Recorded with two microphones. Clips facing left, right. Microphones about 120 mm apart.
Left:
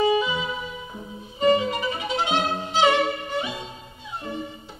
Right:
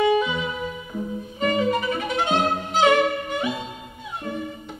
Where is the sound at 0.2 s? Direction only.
50° right (ahead or behind).